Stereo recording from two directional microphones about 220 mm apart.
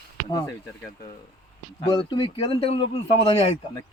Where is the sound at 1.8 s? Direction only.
25° left (ahead or behind).